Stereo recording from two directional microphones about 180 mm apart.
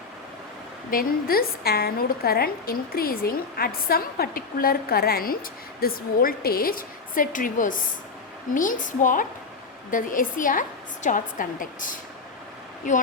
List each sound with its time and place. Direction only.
0.9 s a woman's voice: 55° left (ahead or behind)